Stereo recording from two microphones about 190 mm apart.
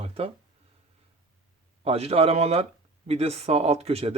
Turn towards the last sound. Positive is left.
turn(degrees=-30)  # may be behind; listen again after turning